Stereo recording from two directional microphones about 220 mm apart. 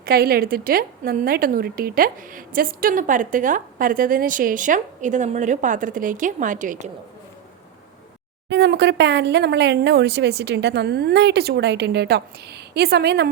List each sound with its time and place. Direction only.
0.0 s a woman's voice: 45° right (ahead or behind)
8.4 s speech: 50° right (ahead or behind)